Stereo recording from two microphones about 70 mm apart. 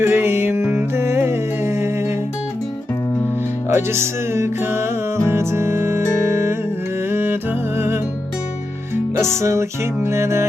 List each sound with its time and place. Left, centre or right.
0.0 s music: right
3.7 s music: right
9.1 s music: right